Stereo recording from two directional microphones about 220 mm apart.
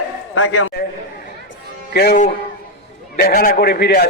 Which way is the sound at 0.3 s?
75° left (ahead or behind).